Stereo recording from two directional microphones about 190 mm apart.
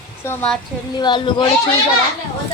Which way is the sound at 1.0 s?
25° left (ahead or behind).